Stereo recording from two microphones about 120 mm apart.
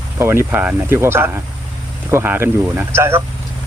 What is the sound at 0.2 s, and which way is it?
Speech, 20° right (ahead or behind).